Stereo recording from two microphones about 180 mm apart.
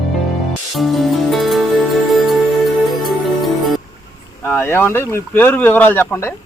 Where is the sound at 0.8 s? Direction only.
Centre (ahead or behind).